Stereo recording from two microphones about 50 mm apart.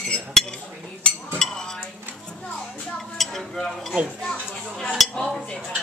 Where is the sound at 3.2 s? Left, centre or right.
Centre.